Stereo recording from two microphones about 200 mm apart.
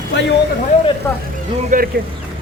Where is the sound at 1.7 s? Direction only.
40° right (ahead or behind).